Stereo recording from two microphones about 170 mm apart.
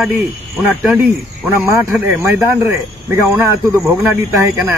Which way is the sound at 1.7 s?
10° right (ahead or behind).